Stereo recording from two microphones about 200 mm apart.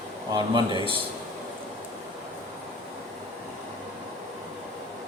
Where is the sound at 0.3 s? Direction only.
20° right (ahead or behind).